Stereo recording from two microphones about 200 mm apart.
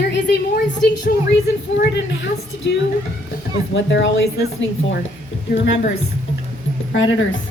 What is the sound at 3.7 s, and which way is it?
Speech, 65° left (ahead or behind).